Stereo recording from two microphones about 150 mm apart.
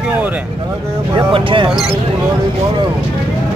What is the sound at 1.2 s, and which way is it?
Speech, 35° right (ahead or behind).